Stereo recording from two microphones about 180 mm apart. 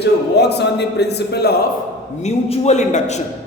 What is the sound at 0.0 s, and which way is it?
Speech, 70° left (ahead or behind).